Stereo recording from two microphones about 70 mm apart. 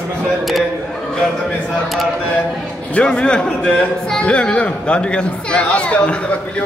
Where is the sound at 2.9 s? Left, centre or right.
Centre.